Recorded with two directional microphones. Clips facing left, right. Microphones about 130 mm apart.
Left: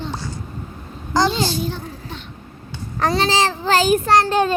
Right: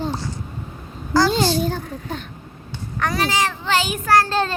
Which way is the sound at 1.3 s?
45° right (ahead or behind).